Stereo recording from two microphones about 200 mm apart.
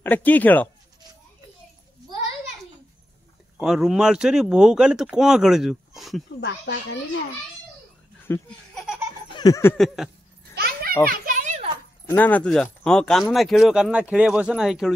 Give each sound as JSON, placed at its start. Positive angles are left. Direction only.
{"t": 0.0, "sound": "speech", "side_deg": 10}
{"t": 3.5, "sound": "speech", "side_deg": 0}
{"t": 6.4, "sound": "a child's voice", "side_deg": 60}
{"t": 8.3, "sound": "laughter", "side_deg": 5}
{"t": 9.3, "sound": "a sound", "side_deg": 20}
{"t": 9.8, "sound": "speech", "side_deg": 0}
{"t": 10.5, "sound": "children playing", "side_deg": -50}
{"t": 11.1, "sound": "a sound", "side_deg": -40}
{"t": 12.1, "sound": "speech", "side_deg": 10}